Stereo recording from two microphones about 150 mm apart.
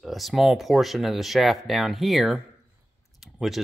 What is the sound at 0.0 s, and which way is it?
Speech, centre (ahead or behind).